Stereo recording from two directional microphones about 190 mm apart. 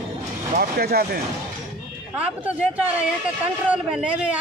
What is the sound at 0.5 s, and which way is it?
Speech, 50° right (ahead or behind).